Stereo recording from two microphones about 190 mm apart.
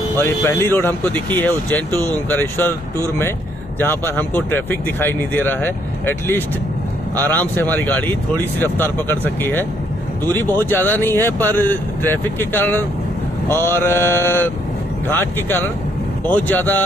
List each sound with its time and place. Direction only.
0.1 s speech: 10° left (ahead or behind)